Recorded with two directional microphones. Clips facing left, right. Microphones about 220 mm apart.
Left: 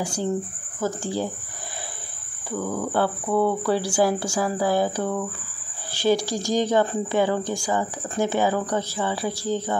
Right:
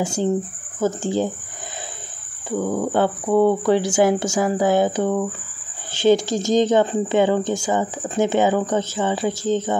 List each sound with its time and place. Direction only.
0.0 s speech: 25° right (ahead or behind)
2.5 s speech: 25° right (ahead or behind)